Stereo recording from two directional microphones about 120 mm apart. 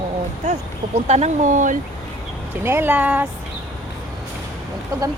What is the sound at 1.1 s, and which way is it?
Speech, 70° right (ahead or behind).